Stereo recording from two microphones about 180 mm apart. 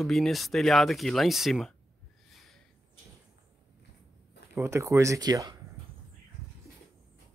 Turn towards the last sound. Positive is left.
turn(degrees=-20)  # may be behind; listen again after turning